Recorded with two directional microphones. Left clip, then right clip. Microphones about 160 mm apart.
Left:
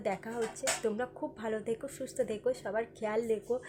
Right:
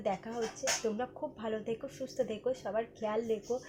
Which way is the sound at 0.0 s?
20° left (ahead or behind).